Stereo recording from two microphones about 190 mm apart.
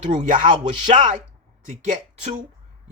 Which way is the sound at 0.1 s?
40° right (ahead or behind).